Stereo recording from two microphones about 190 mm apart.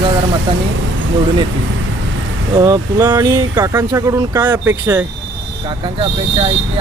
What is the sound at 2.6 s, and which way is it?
Speech, 20° right (ahead or behind).